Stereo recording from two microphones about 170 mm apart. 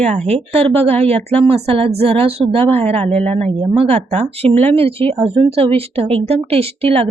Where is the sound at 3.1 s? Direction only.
10° left (ahead or behind).